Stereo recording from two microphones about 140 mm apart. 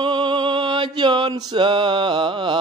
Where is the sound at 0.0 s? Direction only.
35° right (ahead or behind).